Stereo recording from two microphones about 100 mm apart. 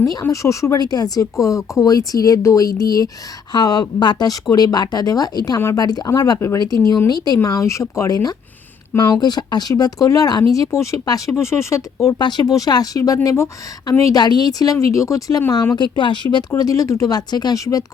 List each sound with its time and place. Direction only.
0.0 s speech: 35° left (ahead or behind)
12.0 s speech: 45° left (ahead or behind); by 15.7 s 30° left (ahead or behind)
15.7 s speech: 50° left (ahead or behind)
16.5 s speech: 35° left (ahead or behind)